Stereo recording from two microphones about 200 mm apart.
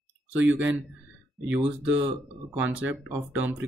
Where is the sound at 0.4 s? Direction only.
10° right (ahead or behind).